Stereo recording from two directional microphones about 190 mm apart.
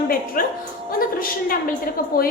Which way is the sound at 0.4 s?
50° left (ahead or behind).